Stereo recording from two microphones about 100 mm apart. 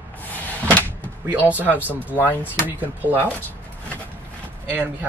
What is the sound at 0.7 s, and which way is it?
Door, 15° left (ahead or behind).